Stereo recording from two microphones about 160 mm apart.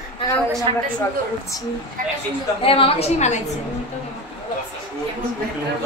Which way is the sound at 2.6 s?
35° left (ahead or behind).